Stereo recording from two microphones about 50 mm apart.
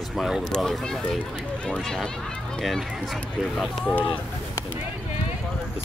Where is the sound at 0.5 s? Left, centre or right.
Centre.